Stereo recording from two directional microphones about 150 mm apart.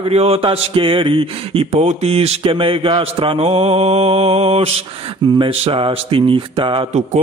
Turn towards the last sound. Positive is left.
turn(degrees=-35)  # may be behind; listen again after turning